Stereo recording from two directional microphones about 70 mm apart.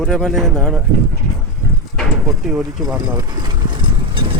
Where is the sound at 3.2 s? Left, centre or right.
Right.